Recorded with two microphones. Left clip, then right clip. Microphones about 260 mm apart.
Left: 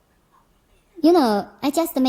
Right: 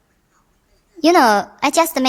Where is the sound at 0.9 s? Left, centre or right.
Right.